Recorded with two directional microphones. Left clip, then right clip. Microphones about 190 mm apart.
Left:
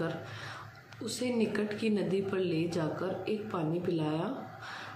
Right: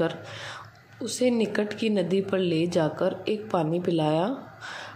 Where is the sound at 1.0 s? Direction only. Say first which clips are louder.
Right 8 dB; 30° right (ahead or behind).